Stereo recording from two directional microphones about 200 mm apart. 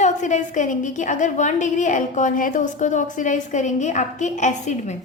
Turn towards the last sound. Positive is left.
turn(degrees=35)  # may be behind; listen again after turning